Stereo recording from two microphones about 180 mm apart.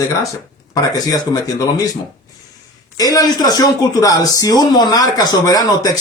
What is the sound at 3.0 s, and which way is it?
Speech, 20° left (ahead or behind).